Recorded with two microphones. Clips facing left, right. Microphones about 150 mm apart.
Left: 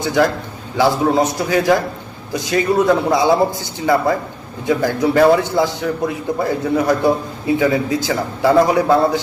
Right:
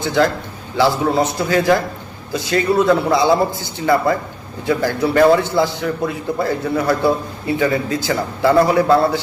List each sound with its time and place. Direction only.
0.0 s a man's voice: 15° left (ahead or behind)